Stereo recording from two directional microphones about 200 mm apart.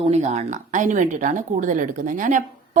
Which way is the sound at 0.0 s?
35° right (ahead or behind).